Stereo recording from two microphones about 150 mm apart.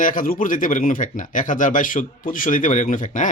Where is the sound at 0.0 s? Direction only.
65° left (ahead or behind).